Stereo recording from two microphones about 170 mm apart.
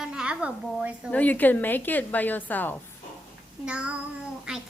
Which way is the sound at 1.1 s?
10° left (ahead or behind).